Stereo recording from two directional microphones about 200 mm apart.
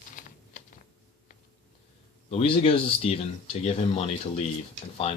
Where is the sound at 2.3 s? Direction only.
30° left (ahead or behind).